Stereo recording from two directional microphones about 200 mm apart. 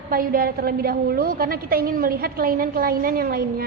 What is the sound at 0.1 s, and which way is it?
A woman's voice, 45° right (ahead or behind).